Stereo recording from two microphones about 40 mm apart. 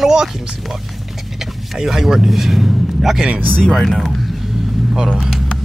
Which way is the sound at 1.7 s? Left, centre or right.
Centre.